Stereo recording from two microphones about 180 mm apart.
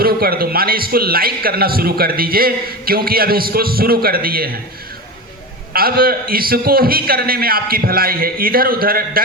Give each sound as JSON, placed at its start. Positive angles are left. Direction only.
{"t": 0.0, "sound": "a man's voice", "side_deg": -55}
{"t": 5.7, "sound": "a man's voice", "side_deg": -55}